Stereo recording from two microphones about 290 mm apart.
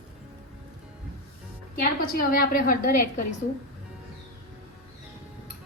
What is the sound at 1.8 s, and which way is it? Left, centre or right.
A woman's voice, left.